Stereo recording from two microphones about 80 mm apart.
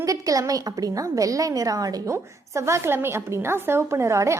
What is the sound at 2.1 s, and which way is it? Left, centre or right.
A woman's voice, right.